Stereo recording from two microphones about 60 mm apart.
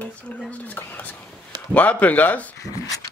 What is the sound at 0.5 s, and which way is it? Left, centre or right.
Speech, left.